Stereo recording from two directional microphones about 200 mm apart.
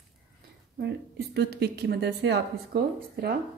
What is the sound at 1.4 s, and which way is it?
A woman's voice, 55° right (ahead or behind).